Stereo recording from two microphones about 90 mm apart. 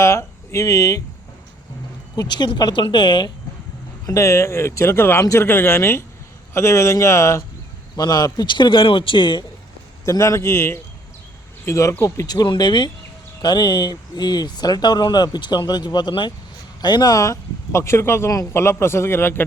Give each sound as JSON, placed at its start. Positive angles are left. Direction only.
{"t": 0.0, "sound": "speech", "side_deg": 35}
{"t": 2.1, "sound": "speech", "side_deg": 55}
{"t": 2.8, "sound": "a man's voice", "side_deg": 60}
{"t": 4.0, "sound": "speech", "side_deg": 35}
{"t": 7.9, "sound": "a man's voice", "side_deg": 50}
{"t": 10.1, "sound": "speech", "side_deg": 35}